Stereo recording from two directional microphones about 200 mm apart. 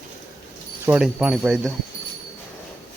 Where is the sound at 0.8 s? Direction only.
5° right (ahead or behind).